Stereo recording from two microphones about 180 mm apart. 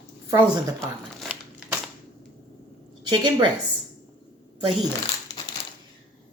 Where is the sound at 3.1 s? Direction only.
25° right (ahead or behind).